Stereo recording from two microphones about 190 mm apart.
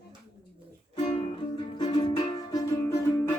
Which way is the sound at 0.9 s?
35° left (ahead or behind).